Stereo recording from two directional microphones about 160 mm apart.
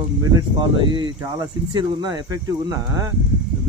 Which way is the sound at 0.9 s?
30° right (ahead or behind).